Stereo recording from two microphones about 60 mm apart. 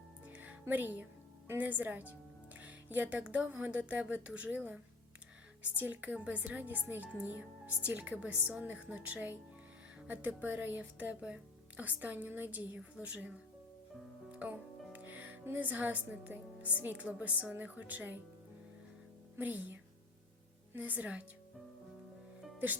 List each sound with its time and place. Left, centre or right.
0.3 s music: right
0.7 s speech: right
14.3 s music: right
14.9 s speech: right
19.4 s speech: right
20.7 s speech: right